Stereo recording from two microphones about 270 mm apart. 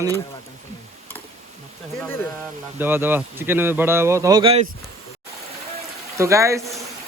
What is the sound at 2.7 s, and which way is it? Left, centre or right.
Speech, centre.